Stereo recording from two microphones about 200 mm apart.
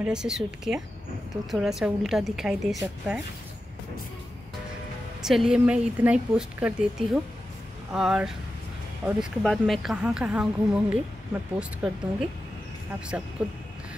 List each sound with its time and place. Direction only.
0.0 s speech: 5° right (ahead or behind)
5.2 s speech: centre (ahead or behind)